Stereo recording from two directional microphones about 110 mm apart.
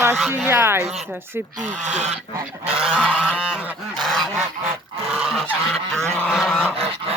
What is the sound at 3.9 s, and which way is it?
Goose, 5° left (ahead or behind).